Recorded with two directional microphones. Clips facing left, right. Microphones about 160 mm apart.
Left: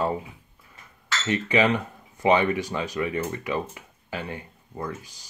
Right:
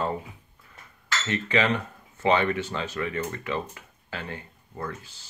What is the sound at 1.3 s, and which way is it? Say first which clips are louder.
Speech: left 3 dB; 15° left (ahead or behind).